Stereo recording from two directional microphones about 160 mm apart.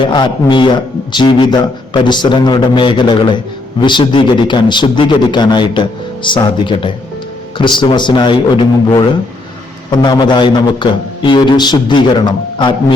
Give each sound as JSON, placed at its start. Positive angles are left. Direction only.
{"t": 0.0, "sound": "a man's voice", "side_deg": 30}